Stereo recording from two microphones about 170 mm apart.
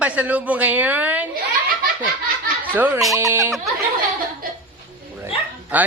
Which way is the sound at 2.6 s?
10° right (ahead or behind).